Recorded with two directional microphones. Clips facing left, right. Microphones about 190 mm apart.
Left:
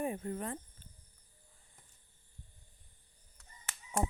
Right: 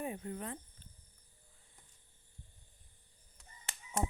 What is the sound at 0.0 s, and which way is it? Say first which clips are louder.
Speech: left 4 dB; 50° left (ahead or behind).